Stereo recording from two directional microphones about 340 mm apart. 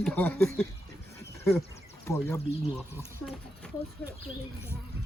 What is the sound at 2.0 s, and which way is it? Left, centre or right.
A child's voice, centre.